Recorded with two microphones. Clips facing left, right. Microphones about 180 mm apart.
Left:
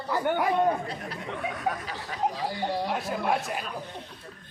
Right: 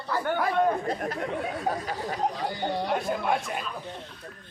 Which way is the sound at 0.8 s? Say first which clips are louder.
Right 6 dB; 45° right (ahead or behind).